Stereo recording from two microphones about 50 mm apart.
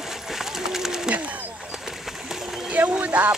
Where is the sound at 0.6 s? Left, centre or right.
Centre.